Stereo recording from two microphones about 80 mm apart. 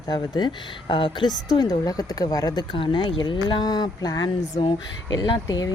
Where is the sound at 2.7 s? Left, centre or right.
Left.